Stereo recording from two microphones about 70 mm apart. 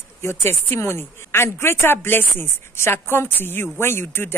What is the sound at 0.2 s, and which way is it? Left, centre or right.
A woman's voice, left.